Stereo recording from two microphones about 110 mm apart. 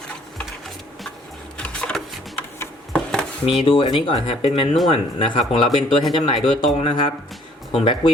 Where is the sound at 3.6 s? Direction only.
55° left (ahead or behind).